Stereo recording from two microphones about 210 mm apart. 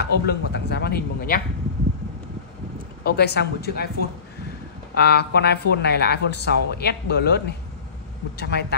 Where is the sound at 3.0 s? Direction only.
50° left (ahead or behind).